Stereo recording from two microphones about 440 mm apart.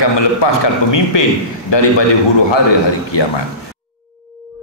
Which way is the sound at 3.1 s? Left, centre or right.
Left.